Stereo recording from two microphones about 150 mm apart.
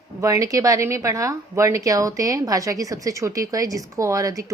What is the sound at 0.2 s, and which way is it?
A woman's voice, 20° right (ahead or behind).